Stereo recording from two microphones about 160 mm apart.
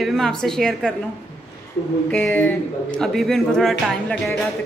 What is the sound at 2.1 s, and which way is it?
Speech, 10° left (ahead or behind).